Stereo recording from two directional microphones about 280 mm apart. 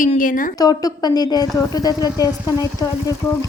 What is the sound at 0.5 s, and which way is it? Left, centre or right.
A woman's voice, centre.